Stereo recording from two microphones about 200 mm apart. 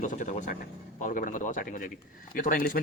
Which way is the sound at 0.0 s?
40° left (ahead or behind).